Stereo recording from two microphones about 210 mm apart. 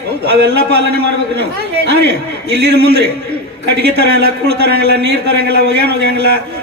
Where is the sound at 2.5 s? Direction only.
50° right (ahead or behind).